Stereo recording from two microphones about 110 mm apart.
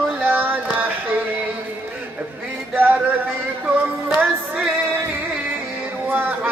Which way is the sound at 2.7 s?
15° right (ahead or behind).